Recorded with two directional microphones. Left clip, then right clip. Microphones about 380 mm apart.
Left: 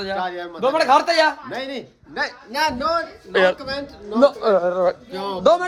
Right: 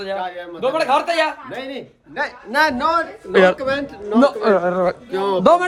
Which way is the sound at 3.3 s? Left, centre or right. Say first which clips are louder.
Right 4 dB; centre.